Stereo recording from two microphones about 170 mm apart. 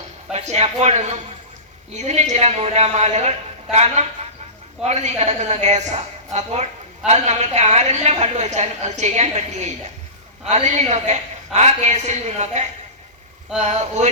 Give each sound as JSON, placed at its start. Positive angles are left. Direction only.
{"t": 0.3, "sound": "a woman's voice", "side_deg": -40}